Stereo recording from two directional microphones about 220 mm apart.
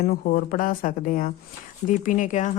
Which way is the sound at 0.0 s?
40° left (ahead or behind).